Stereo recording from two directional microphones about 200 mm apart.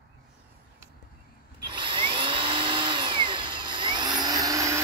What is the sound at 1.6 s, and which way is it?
Drill, 25° right (ahead or behind).